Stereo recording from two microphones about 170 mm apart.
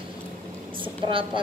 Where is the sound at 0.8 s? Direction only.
30° right (ahead or behind).